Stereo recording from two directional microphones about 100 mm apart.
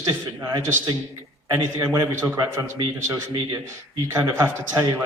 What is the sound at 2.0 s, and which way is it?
Speech, 30° right (ahead or behind).